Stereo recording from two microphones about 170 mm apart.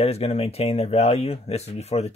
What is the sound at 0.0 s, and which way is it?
Speech, 35° left (ahead or behind).